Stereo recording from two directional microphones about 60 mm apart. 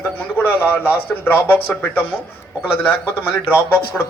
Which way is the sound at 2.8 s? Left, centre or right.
Left.